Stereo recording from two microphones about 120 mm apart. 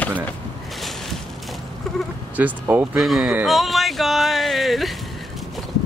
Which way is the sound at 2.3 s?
15° right (ahead or behind).